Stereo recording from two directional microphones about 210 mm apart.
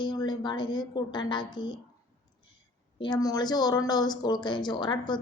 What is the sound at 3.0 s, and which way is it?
A woman's voice, 20° left (ahead or behind).